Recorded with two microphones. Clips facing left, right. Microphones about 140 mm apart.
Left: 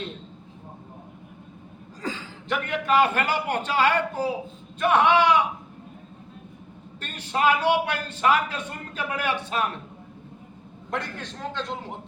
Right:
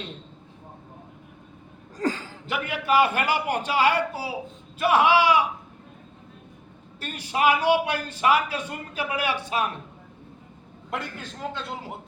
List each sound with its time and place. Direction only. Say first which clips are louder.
2.0 s a sound: right 6 dB; 45° right (ahead or behind)
2.5 s a man's voice: left 1 dB; 10° right (ahead or behind)
7.0 s a man's voice: right 1 dB; 10° right (ahead or behind)
10.9 s a man's voice: left 1 dB; 5° right (ahead or behind)